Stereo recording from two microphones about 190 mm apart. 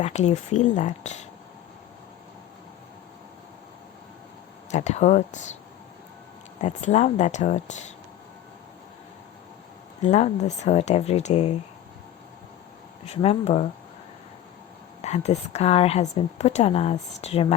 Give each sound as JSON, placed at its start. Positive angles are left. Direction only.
{"t": 0.0, "sound": "speech", "side_deg": 35}
{"t": 4.7, "sound": "speech", "side_deg": 35}
{"t": 6.6, "sound": "speech", "side_deg": 40}
{"t": 10.0, "sound": "speech", "side_deg": 35}
{"t": 13.1, "sound": "speech", "side_deg": 35}
{"t": 15.0, "sound": "speech", "side_deg": 35}